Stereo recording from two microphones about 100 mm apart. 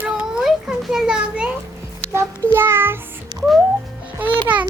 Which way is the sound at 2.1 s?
25° right (ahead or behind).